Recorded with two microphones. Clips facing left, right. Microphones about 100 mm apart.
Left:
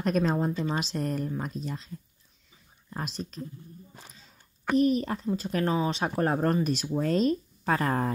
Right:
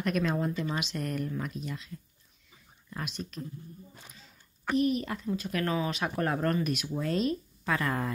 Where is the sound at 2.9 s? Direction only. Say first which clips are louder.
Left 3 dB; 35° left (ahead or behind).